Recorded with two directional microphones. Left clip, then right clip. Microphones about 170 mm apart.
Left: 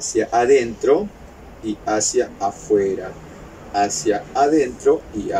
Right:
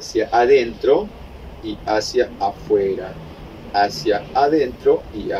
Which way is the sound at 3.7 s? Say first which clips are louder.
Right 1 dB; 10° left (ahead or behind).